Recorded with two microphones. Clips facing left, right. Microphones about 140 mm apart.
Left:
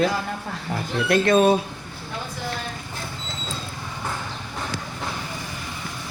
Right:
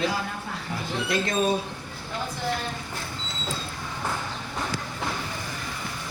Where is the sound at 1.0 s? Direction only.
60° left (ahead or behind).